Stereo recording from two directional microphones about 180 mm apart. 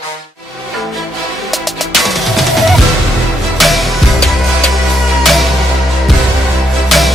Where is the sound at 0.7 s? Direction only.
Centre (ahead or behind).